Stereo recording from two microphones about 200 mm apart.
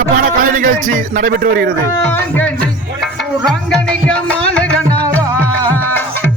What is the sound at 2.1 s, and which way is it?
Music, 10° left (ahead or behind).